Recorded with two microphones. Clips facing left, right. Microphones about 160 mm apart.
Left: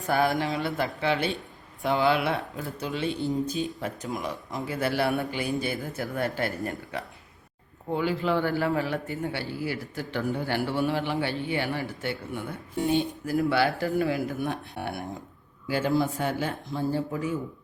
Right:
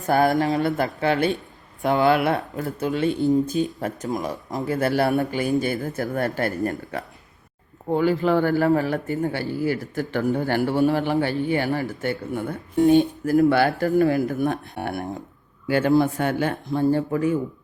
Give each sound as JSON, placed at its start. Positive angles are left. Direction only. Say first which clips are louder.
{"t": 0.1, "sound": "a man's voice", "louder": "right 6 dB", "side_deg": -45}